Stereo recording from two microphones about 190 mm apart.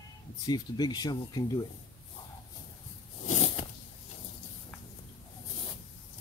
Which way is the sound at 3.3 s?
35° left (ahead or behind).